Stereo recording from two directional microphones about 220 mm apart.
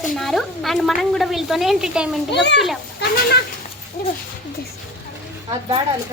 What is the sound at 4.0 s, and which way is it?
Speech, 45° left (ahead or behind).